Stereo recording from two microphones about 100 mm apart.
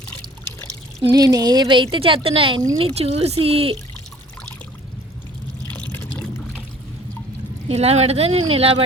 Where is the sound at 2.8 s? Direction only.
80° right.